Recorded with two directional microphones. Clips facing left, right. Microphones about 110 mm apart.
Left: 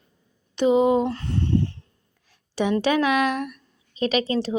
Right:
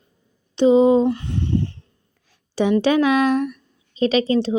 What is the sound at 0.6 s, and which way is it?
Speech, 30° right (ahead or behind).